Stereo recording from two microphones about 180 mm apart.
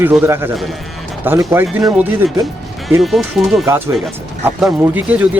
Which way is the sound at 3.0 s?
Centre (ahead or behind).